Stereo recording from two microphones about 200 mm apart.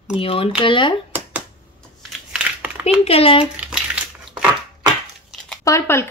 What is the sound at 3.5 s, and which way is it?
Crushing, 5° right (ahead or behind).